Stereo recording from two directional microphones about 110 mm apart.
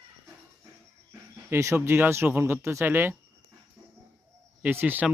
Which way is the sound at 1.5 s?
25° right (ahead or behind).